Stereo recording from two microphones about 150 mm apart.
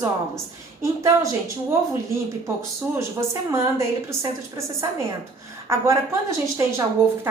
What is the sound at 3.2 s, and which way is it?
A woman's voice, 20° right (ahead or behind).